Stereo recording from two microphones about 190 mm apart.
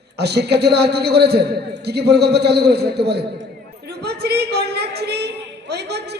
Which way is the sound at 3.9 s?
60° right (ahead or behind).